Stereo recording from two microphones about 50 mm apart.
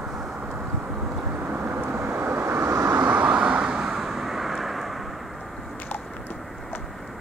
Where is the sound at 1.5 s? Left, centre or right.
Right.